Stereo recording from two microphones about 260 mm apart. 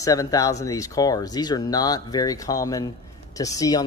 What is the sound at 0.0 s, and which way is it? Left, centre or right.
Speech, centre.